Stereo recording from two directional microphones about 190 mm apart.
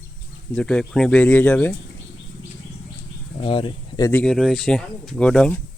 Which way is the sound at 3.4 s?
25° left (ahead or behind).